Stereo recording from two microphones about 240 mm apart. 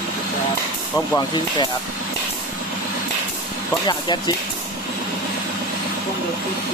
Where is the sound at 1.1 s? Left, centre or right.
Centre.